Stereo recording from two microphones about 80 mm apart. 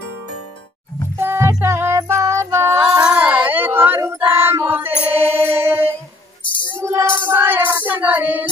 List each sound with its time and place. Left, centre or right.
1.1 s music: right
3.1 s child singing: centre
4.3 s choir: right
4.6 s mantra: right
6.8 s child singing: right